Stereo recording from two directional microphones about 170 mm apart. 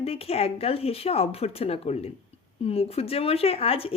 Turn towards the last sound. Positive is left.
turn(degrees=35)  # may be behind; listen again after turning